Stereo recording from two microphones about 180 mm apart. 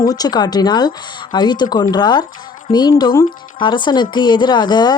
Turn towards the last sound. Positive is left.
turn(degrees=25)  # may be behind; listen again after turning